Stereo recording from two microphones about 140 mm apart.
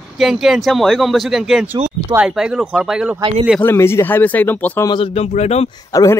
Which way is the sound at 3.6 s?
15° left (ahead or behind).